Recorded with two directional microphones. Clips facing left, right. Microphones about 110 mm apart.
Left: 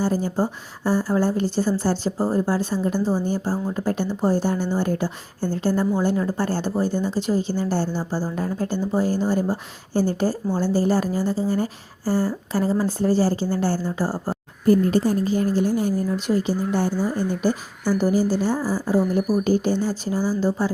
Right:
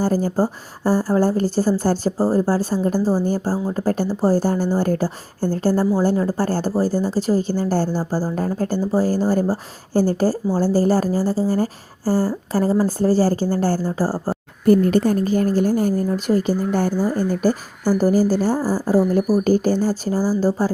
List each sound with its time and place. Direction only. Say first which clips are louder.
0.0 s a woman's voice: right 3 dB; 40° right (ahead or behind)
3.0 s speech: right 3 dB; 10° right (ahead or behind)
3.2 s a woman's voice: right 3 dB; 40° right (ahead or behind)
14.7 s a woman's voice: right 3 dB; 65° right (ahead or behind); by 20.7 s 40° right (ahead or behind)